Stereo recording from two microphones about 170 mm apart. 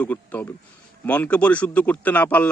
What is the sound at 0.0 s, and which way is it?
A man's voice, 10° left (ahead or behind).